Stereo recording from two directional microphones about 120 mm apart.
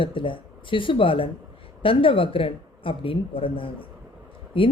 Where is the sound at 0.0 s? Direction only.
45° left (ahead or behind).